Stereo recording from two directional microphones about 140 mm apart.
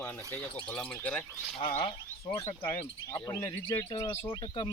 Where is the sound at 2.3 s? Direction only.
20° left (ahead or behind).